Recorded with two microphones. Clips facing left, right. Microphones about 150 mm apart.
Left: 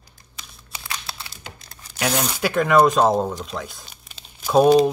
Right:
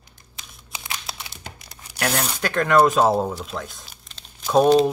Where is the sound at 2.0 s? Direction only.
5° left (ahead or behind).